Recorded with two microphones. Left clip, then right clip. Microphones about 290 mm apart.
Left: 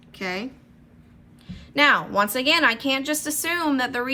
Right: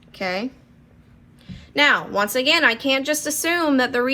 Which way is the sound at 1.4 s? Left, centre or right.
Centre.